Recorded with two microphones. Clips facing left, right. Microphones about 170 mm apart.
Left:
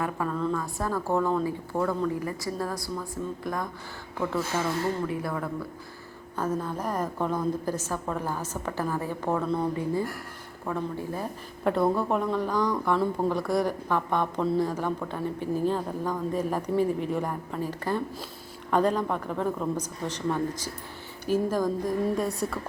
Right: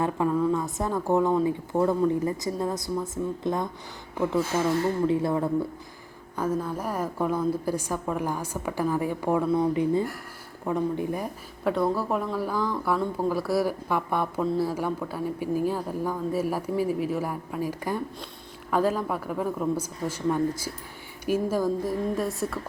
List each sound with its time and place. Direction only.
0.0 s a woman's voice: 15° right (ahead or behind)
6.3 s a woman's voice: 10° right (ahead or behind)
11.6 s a woman's voice: centre (ahead or behind)